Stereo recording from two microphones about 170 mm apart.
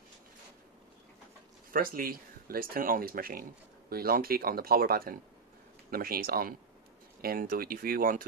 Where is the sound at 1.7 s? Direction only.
55° right (ahead or behind).